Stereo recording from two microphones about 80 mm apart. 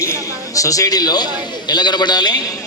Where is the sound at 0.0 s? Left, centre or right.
Left.